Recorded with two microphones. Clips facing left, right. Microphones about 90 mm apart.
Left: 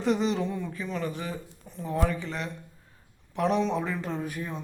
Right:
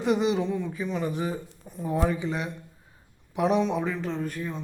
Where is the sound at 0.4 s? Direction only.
Centre (ahead or behind).